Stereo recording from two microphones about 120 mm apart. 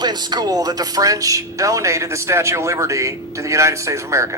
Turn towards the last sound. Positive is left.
turn(degrees=-25)  # may be behind; listen again after turning